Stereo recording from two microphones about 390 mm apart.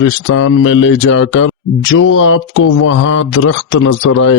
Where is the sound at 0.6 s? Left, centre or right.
Left.